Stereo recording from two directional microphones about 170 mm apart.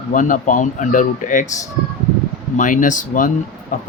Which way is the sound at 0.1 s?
50° left (ahead or behind).